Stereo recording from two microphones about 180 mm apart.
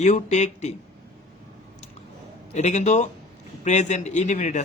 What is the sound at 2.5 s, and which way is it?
A man's voice, 40° left (ahead or behind).